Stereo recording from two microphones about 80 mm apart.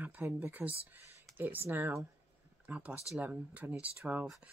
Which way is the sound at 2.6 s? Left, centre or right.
Centre.